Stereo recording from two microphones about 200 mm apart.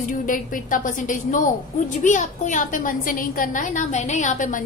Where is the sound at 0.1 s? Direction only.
40° left (ahead or behind).